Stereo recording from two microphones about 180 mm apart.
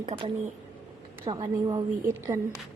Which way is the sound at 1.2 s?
20° right (ahead or behind).